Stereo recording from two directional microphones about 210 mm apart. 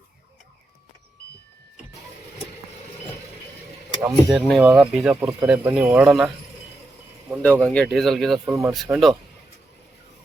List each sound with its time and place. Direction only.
4.0 s speech: centre (ahead or behind)
7.4 s speech: 5° left (ahead or behind)